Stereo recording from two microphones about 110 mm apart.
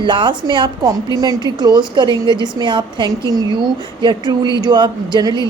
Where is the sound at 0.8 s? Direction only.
35° right (ahead or behind).